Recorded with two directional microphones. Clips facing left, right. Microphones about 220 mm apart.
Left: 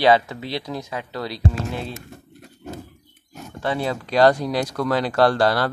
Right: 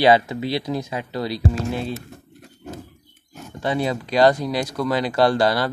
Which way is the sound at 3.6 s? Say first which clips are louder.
Right 2 dB; 15° right (ahead or behind).